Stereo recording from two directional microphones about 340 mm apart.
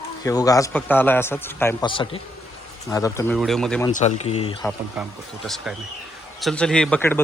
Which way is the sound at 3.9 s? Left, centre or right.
Centre.